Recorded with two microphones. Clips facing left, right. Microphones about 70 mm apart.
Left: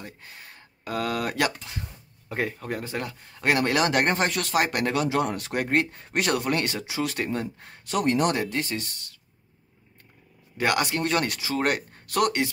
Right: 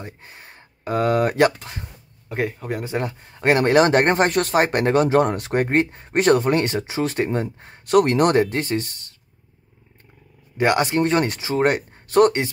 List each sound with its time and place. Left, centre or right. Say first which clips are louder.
0.0 s speech: right 4 dB; right
2.2 s speech: right 4 dB; centre
2.8 s speech: right 6 dB; right
7.8 s speech: right 7 dB; right
8.4 s speech: right 8 dB; right
10.6 s speech: right 6 dB; right